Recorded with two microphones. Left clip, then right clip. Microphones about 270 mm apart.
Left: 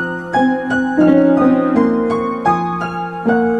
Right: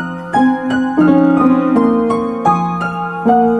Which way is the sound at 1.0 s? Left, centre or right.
Right.